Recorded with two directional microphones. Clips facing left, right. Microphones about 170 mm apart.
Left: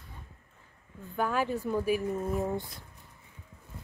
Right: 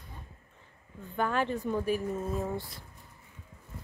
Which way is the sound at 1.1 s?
5° left (ahead or behind).